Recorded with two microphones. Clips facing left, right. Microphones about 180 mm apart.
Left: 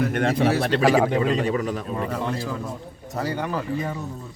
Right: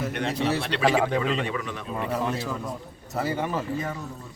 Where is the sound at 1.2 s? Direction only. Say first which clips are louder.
Left 5 dB; 40° left (ahead or behind).